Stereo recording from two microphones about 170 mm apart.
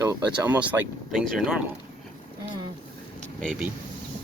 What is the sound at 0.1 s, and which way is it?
Speech, 10° right (ahead or behind).